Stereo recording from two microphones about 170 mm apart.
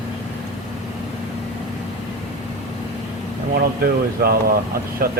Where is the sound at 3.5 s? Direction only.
65° right (ahead or behind).